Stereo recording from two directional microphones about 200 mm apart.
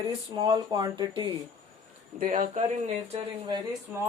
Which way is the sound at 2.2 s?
45° right (ahead or behind).